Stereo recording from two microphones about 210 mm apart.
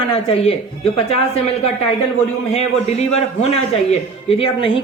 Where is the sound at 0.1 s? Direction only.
25° left (ahead or behind).